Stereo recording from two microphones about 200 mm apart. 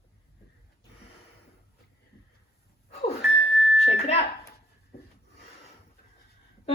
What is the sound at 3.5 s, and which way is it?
Music, centre (ahead or behind).